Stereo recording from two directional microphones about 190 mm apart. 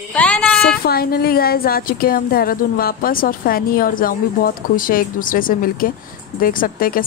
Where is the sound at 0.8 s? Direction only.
55° left (ahead or behind).